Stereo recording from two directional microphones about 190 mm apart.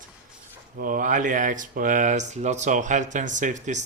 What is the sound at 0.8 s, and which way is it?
Speech, 45° right (ahead or behind).